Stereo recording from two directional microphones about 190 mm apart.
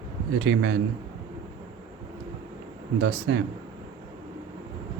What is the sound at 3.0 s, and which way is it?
Speech, 65° right (ahead or behind).